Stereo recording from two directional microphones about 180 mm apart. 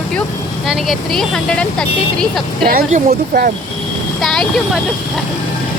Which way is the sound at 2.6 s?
55° right (ahead or behind).